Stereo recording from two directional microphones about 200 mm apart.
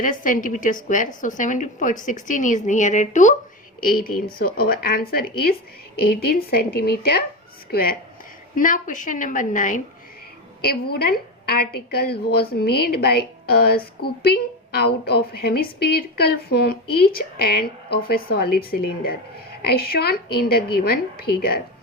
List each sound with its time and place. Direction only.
0.0 s a woman's voice: 40° left (ahead or behind)
10.7 s a woman's voice: 50° left (ahead or behind)